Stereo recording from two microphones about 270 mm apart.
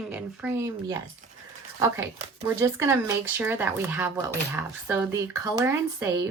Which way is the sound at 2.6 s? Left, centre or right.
Centre.